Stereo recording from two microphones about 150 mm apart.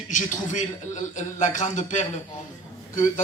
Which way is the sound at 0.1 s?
55° left (ahead or behind).